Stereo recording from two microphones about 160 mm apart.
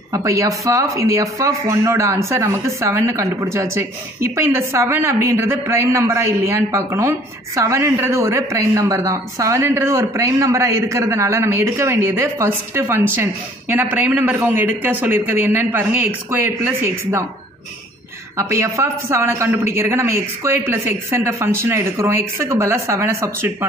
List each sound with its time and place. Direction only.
0.1 s speech: 20° right (ahead or behind)
18.3 s speech: 20° right (ahead or behind)